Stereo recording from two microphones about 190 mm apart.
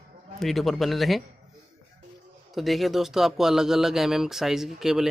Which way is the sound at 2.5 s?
Centre (ahead or behind).